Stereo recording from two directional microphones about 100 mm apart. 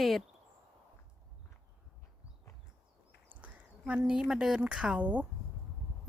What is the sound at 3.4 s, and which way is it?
A woman's voice, 10° right (ahead or behind).